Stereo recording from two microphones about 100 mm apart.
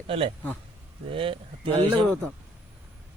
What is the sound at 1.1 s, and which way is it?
Speech, 65° right (ahead or behind).